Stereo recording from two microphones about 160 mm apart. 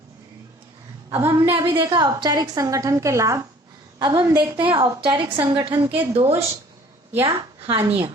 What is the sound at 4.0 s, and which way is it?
Speech, 30° right (ahead or behind).